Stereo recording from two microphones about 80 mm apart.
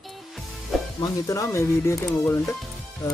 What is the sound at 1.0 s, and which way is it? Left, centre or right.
Speech, left.